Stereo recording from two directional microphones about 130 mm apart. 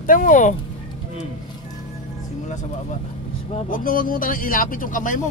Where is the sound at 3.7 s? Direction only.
90° left.